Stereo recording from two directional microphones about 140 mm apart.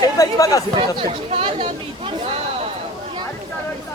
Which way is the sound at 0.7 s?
40° right (ahead or behind).